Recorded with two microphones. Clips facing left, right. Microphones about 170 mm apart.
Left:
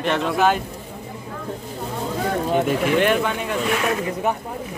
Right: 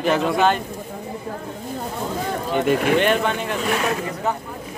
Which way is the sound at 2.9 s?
5° left (ahead or behind).